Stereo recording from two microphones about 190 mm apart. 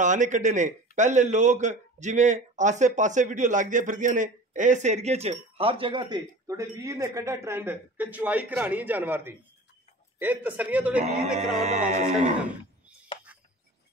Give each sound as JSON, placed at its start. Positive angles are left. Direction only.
{"t": 0.0, "sound": "a man's voice", "side_deg": -40}
{"t": 11.5, "sound": "a man's voice", "side_deg": -35}